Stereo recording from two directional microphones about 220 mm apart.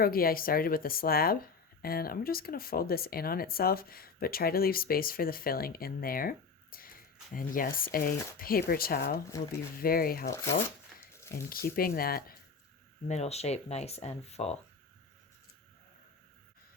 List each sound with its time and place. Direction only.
0.0 s speech: 40° left (ahead or behind)
11.1 s a sound: 10° left (ahead or behind)
11.4 s speech: 40° left (ahead or behind)
13.1 s speech: 30° left (ahead or behind)